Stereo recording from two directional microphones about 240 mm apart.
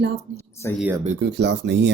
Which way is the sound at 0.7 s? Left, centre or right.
Centre.